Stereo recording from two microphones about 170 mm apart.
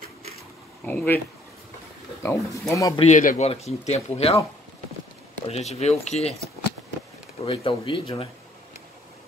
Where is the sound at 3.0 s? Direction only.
45° left (ahead or behind).